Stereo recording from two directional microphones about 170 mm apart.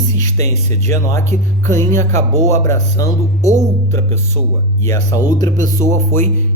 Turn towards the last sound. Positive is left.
turn(degrees=15)  # may be behind; listen again after turning